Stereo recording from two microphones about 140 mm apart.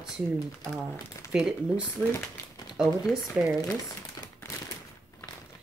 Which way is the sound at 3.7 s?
25° left (ahead or behind).